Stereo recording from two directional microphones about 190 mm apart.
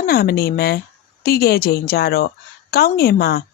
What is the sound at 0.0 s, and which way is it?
A woman's voice, 55° left (ahead or behind).